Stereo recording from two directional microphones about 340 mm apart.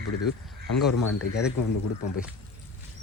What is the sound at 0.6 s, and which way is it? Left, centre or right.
Speech, left.